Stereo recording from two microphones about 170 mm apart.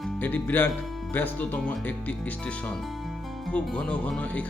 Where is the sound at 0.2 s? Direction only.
10° left (ahead or behind).